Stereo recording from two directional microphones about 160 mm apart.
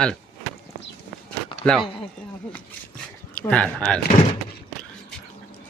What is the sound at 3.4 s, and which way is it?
Speech, 5° left (ahead or behind).